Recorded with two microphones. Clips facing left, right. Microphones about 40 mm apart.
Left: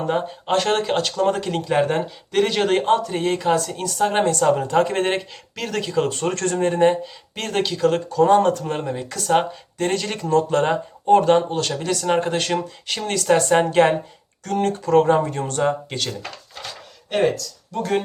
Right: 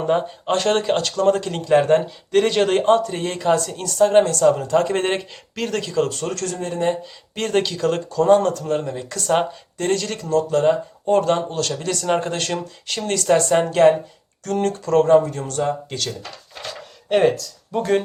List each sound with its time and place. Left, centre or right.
0.0 s speech: centre; by 4.9 s left
4.9 s speech: centre
6.0 s speech: left
7.3 s speech: centre
8.4 s speech: left
9.0 s speech: centre; by 10.8 s left
11.0 s speech: centre
14.4 s speech: centre
16.6 s a sound: centre
17.7 s speech: centre